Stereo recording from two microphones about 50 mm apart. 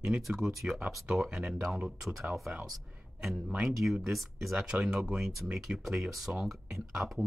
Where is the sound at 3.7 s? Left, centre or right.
Centre.